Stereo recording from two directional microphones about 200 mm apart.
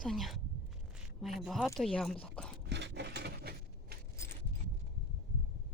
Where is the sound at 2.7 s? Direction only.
60° right (ahead or behind).